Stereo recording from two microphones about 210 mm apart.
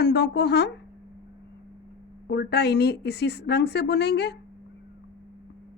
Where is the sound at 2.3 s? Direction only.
50° left (ahead or behind).